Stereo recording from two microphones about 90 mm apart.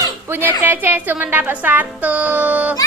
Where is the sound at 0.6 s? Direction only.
20° right (ahead or behind).